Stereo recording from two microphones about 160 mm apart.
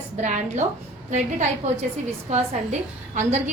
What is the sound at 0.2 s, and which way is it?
A woman's voice, 50° right (ahead or behind).